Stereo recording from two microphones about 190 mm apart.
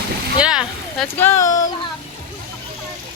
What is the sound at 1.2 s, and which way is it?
Speech, 15° left (ahead or behind).